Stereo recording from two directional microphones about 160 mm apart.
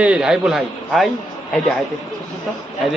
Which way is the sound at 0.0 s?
5° right (ahead or behind).